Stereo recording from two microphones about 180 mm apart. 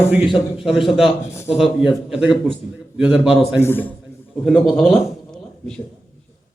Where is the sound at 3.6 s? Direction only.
10° left (ahead or behind).